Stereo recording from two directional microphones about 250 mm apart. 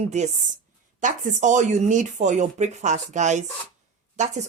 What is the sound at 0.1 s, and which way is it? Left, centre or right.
Speech, right.